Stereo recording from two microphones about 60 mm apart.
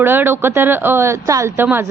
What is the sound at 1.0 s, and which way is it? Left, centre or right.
Speech, right.